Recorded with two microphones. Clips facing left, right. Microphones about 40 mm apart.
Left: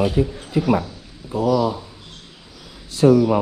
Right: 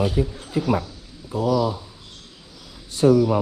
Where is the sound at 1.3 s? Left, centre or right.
Left.